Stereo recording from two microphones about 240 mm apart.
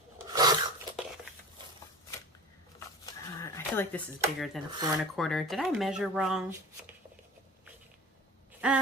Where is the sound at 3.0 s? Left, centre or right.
Centre.